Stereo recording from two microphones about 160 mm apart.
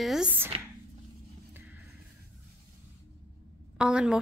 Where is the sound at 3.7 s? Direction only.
5° right (ahead or behind).